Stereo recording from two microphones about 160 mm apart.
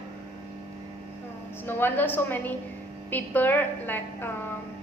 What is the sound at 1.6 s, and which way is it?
A woman's voice, 10° left (ahead or behind).